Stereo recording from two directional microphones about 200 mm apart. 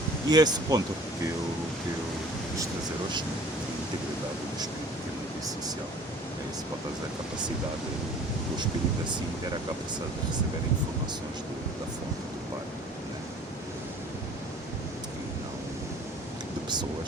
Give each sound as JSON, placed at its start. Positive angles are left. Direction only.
{"t": 0.3, "sound": "speech", "side_deg": -20}